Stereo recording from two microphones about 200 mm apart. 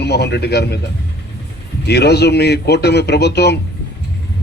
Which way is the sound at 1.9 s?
55° left (ahead or behind).